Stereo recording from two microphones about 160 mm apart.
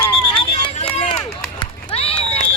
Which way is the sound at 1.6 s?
40° left (ahead or behind).